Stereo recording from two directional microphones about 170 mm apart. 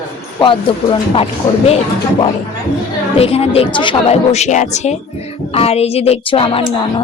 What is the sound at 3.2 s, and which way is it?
A woman's voice, 35° left (ahead or behind).